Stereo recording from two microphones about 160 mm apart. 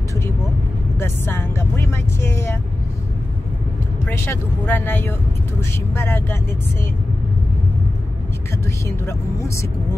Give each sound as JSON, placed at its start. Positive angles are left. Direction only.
{"t": 0.9, "sound": "speech", "side_deg": 15}
{"t": 4.3, "sound": "speech", "side_deg": 10}
{"t": 8.8, "sound": "speech", "side_deg": 20}